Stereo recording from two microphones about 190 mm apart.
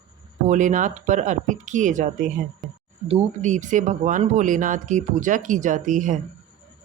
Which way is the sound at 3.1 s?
35° right (ahead or behind).